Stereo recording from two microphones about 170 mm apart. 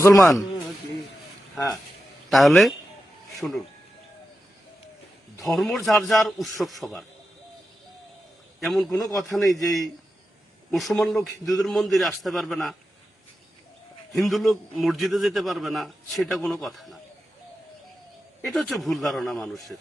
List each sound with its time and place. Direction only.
0.0 s speech: 15° left (ahead or behind)
1.5 s speech: 20° left (ahead or behind)
2.3 s a man's voice: centre (ahead or behind)
5.5 s a man's voice: centre (ahead or behind)
8.6 s a man's voice: centre (ahead or behind)
14.1 s a man's voice: centre (ahead or behind)
18.4 s a man's voice: centre (ahead or behind)